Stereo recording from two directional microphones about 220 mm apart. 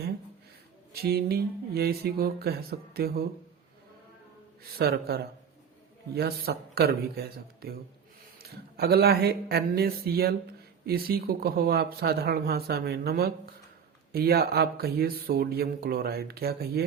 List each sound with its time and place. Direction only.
0.9 s speech: 45° right (ahead or behind)
4.8 s speech: 45° right (ahead or behind)